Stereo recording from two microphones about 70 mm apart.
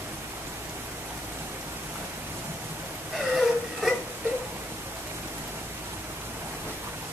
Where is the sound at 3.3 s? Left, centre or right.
Centre.